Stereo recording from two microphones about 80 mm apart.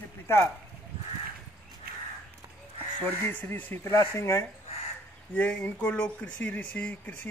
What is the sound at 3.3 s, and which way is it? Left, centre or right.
A man's voice, left.